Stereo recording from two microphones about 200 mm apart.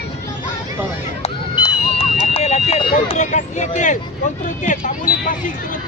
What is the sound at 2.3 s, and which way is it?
Vehicle, 30° left (ahead or behind).